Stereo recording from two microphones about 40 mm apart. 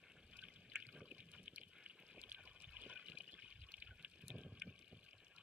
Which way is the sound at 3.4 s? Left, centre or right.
Right.